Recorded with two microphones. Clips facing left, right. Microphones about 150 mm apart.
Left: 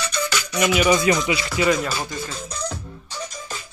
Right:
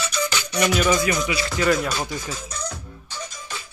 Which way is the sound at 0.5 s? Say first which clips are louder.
Left 1 dB; 5° left (ahead or behind).